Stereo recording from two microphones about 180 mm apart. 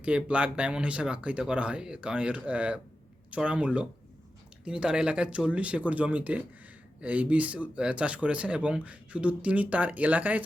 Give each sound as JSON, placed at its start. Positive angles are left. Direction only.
{"t": 0.0, "sound": "speech", "side_deg": -5}